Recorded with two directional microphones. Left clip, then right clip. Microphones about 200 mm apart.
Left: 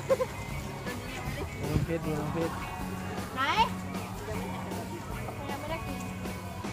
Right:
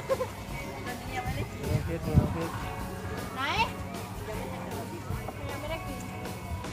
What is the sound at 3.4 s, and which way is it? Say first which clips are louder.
Children playing: left 2 dB; 15° left (ahead or behind).